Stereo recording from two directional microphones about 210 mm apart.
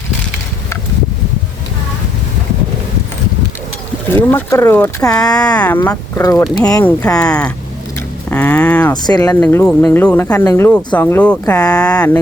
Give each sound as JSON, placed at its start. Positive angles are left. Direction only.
{"t": 4.1, "sound": "speech", "side_deg": 10}
{"t": 7.2, "sound": "speech", "side_deg": 5}
{"t": 8.9, "sound": "speech", "side_deg": 20}
{"t": 11.9, "sound": "speech", "side_deg": 15}